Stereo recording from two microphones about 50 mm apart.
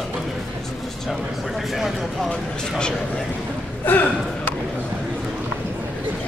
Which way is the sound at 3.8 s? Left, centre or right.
Left.